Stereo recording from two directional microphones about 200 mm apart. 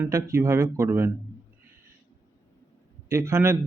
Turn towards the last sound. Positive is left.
turn(degrees=-15)  # may be behind; listen again after turning